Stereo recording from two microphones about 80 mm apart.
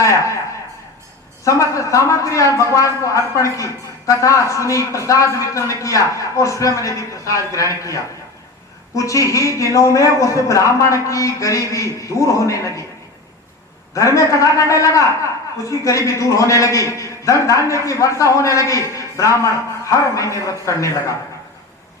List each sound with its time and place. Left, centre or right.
0.0 s a woman's voice: left
1.5 s speech: left
13.9 s speech: left